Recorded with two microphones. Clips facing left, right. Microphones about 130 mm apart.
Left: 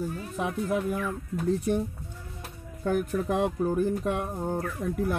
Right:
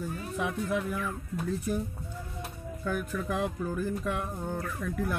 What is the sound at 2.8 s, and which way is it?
Speech, 35° left (ahead or behind).